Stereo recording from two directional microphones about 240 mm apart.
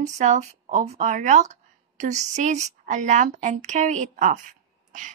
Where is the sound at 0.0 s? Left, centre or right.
Right.